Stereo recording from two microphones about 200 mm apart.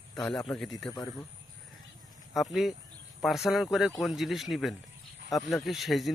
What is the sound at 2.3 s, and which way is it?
Speech, centre (ahead or behind).